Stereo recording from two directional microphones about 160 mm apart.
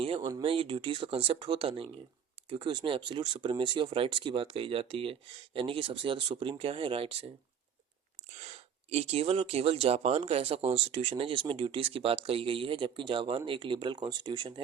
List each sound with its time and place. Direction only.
0.0 s speech: 30° right (ahead or behind)
8.4 s speech: 40° right (ahead or behind)